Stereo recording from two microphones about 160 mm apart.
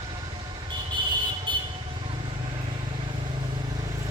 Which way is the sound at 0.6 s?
30° right (ahead or behind).